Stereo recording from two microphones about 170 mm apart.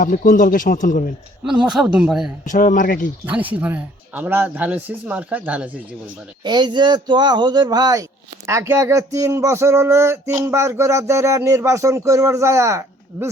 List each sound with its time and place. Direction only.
0.0 s speech: 55° left (ahead or behind)
1.5 s speech: 5° right (ahead or behind)
2.4 s speech: 50° left (ahead or behind)
3.2 s speech: 10° right (ahead or behind)
6.4 s speech: 25° right (ahead or behind)